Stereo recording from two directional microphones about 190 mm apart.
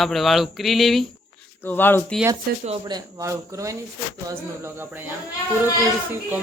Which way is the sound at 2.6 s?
30° right (ahead or behind).